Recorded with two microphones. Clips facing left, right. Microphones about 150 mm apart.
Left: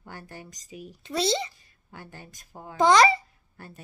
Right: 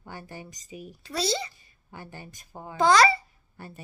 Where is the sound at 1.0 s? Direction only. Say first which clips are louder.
Left 3 dB; 25° left (ahead or behind).